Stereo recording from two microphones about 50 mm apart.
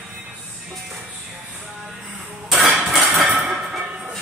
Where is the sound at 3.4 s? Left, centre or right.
Centre.